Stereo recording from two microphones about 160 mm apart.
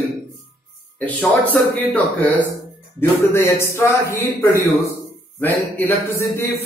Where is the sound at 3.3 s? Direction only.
15° left (ahead or behind).